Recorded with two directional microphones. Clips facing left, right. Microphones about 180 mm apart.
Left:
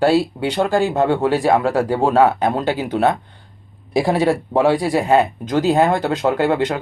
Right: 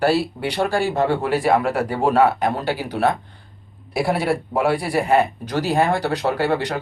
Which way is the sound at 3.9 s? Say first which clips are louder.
Left 4 dB; 90° left.